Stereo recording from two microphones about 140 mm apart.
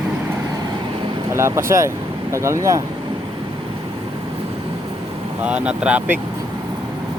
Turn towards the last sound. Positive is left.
turn(degrees=-10)  # may be behind; listen again after turning